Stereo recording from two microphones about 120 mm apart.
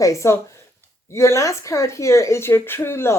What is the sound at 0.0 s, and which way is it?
Speech, 25° left (ahead or behind).